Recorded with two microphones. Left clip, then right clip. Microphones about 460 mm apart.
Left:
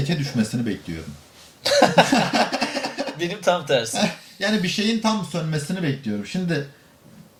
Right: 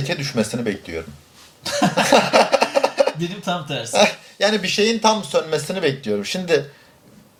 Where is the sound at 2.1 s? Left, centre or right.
Right.